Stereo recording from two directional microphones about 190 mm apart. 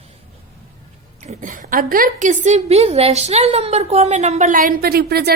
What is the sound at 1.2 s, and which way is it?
A woman's voice, 40° right (ahead or behind).